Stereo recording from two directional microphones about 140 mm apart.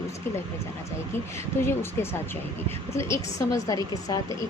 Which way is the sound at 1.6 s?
15° left (ahead or behind).